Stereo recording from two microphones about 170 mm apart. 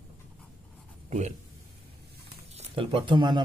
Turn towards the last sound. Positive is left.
turn(degrees=-25)  # may be behind; listen again after turning